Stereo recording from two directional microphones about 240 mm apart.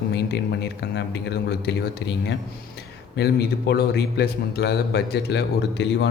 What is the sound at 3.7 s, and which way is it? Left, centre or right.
Speech, left.